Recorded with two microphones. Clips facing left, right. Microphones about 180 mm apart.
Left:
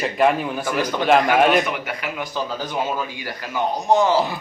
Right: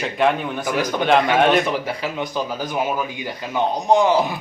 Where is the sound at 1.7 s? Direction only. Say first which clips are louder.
Right 4 dB; 30° right (ahead or behind).